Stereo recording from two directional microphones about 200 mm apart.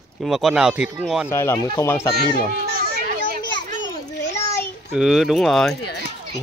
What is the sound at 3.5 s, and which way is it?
Children playing, 65° left (ahead or behind).